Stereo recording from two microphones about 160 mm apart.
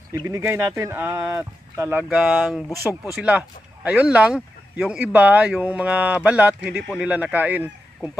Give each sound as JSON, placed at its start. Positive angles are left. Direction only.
{"t": 0.3, "sound": "speech", "side_deg": -15}